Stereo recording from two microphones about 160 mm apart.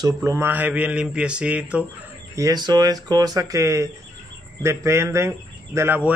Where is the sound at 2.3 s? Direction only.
20° right (ahead or behind).